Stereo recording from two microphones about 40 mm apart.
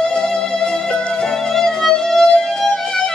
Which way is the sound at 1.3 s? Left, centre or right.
Centre.